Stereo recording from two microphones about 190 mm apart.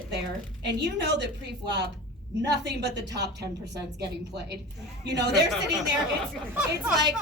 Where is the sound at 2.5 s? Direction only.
65° right (ahead or behind).